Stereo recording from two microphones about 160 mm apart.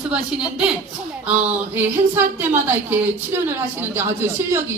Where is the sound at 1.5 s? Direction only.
10° right (ahead or behind).